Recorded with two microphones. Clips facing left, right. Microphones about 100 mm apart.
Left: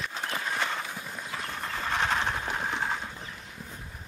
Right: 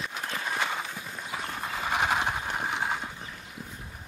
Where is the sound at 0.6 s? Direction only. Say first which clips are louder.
Right 1 dB; 10° right (ahead or behind).